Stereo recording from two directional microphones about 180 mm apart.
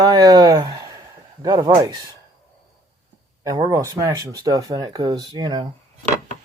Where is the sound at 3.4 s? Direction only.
15° right (ahead or behind).